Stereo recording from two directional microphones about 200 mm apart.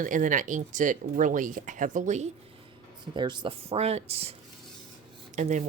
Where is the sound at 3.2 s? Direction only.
25° right (ahead or behind).